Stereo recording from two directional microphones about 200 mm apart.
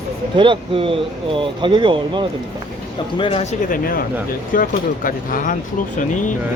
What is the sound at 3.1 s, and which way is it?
Speech, 25° left (ahead or behind).